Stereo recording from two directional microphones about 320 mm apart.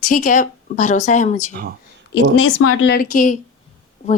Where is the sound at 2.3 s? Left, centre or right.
Left.